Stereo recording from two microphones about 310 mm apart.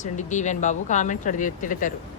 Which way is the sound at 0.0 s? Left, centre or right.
Left.